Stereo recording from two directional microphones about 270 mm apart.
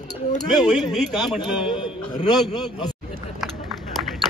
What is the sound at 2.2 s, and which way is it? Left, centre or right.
Speech, centre.